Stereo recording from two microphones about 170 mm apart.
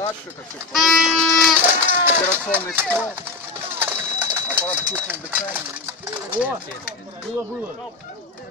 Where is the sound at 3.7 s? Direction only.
10° right (ahead or behind).